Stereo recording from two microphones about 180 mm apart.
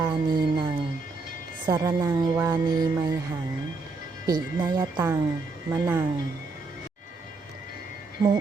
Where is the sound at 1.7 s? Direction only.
20° right (ahead or behind).